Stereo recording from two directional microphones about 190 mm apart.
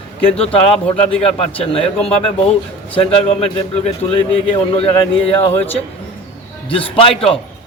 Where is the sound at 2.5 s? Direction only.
30° left (ahead or behind).